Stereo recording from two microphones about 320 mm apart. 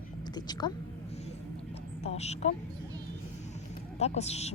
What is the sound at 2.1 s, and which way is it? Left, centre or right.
Speech, centre.